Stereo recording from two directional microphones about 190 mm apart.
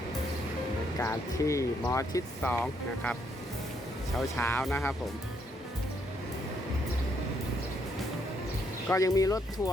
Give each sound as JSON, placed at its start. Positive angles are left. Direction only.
{"t": 0.9, "sound": "speech", "side_deg": 15}
{"t": 4.4, "sound": "speech", "side_deg": 10}
{"t": 8.9, "sound": "speech", "side_deg": 15}